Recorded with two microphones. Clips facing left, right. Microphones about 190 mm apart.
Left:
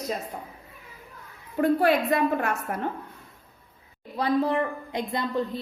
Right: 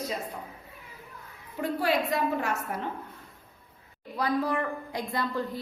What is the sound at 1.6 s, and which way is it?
A woman's voice, 55° left (ahead or behind).